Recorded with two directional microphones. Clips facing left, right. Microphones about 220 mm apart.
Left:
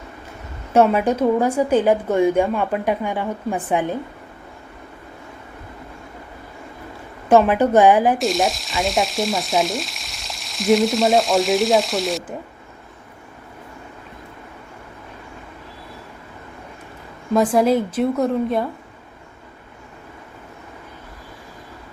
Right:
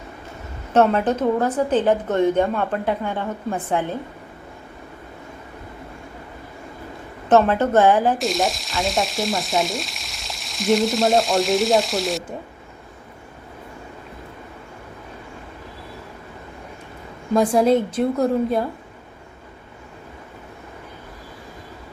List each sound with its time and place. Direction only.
0.7 s a woman's voice: 10° left (ahead or behind)
7.3 s a woman's voice: 10° left (ahead or behind)
8.2 s frying: centre (ahead or behind)
17.3 s frying: centre (ahead or behind)